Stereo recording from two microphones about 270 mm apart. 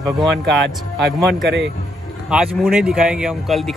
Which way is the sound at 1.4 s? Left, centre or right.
Right.